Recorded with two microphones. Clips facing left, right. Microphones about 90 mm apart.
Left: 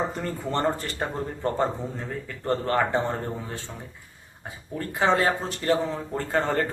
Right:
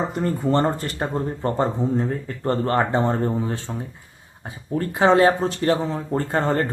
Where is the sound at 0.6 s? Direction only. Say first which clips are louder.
Right 3 dB; 20° right (ahead or behind).